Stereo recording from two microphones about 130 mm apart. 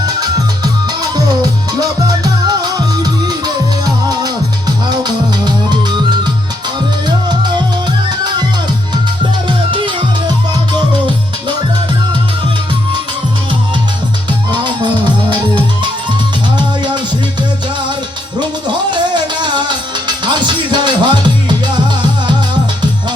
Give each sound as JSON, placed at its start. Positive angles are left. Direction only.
{"t": 0.0, "sound": "music", "side_deg": -30}
{"t": 9.5, "sound": "music", "side_deg": -40}
{"t": 14.5, "sound": "music", "side_deg": -35}
{"t": 18.9, "sound": "music", "side_deg": -35}